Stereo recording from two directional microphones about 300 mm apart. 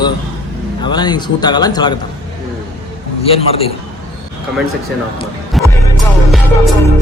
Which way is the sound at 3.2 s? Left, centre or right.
Centre.